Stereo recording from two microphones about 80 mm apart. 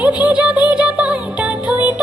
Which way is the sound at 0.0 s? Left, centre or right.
Centre.